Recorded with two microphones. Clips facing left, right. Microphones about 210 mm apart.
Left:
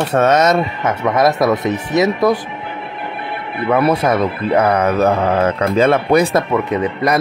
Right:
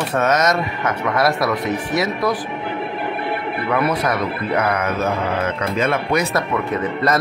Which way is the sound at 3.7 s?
30° left (ahead or behind).